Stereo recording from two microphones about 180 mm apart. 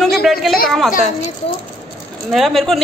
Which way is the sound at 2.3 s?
Centre (ahead or behind).